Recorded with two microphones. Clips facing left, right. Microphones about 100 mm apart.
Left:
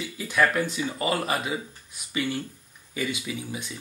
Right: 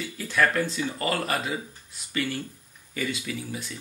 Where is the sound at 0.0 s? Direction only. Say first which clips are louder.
Left 1 dB; 15° left (ahead or behind).